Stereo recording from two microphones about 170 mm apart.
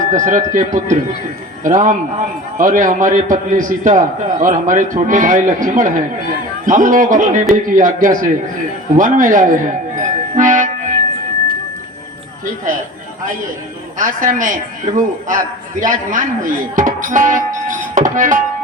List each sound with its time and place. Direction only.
0.1 s a man's voice: 50° right (ahead or behind)
14.0 s a man's voice: 50° right (ahead or behind)